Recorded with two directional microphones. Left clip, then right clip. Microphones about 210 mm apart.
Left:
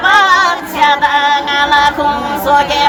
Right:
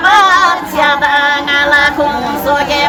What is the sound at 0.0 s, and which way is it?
Female singing, 20° left (ahead or behind).